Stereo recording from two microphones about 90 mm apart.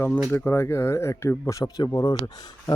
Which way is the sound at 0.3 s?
25° left (ahead or behind).